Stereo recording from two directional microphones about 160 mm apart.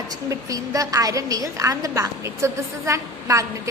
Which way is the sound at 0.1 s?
20° right (ahead or behind).